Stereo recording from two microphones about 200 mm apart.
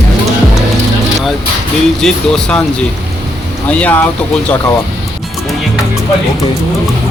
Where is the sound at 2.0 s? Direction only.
5° left (ahead or behind).